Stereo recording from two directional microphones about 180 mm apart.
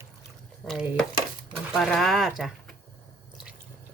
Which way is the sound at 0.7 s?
Centre (ahead or behind).